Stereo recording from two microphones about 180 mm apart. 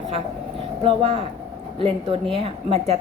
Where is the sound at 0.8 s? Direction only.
30° right (ahead or behind).